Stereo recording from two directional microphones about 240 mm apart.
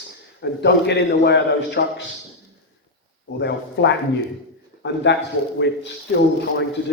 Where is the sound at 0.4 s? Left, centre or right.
Left.